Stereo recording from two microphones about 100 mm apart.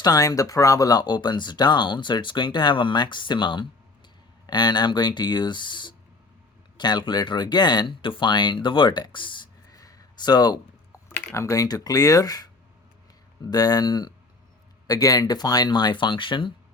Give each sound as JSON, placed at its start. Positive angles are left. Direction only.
{"t": 0.0, "sound": "speech", "side_deg": 35}
{"t": 9.6, "sound": "a sound", "side_deg": 35}
{"t": 11.3, "sound": "speech", "side_deg": 35}